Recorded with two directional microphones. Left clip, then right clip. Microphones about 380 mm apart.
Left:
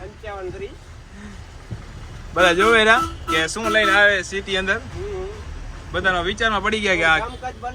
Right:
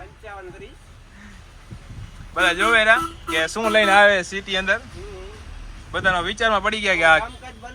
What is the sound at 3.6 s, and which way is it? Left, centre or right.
Speech, centre.